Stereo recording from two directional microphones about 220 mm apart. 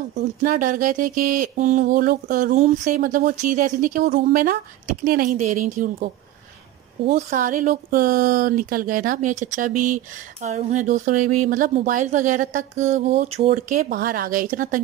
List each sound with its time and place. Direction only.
0.1 s speech: 35° right (ahead or behind)
7.1 s speech: 35° right (ahead or behind)